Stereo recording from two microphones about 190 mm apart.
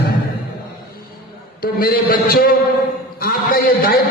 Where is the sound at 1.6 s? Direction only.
50° left (ahead or behind).